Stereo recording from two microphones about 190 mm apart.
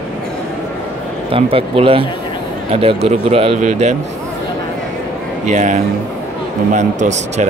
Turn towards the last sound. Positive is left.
turn(degrees=-40)  # may be behind; listen again after turning